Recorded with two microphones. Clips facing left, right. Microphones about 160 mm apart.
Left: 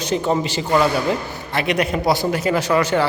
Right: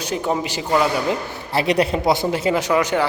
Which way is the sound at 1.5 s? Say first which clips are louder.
Right 2 dB; 35° right (ahead or behind).